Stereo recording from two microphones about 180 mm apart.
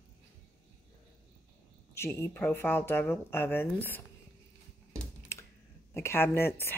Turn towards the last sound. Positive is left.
turn(degrees=10)  # may be behind; listen again after turning